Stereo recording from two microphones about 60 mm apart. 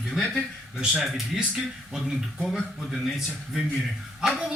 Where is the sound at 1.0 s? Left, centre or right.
Centre.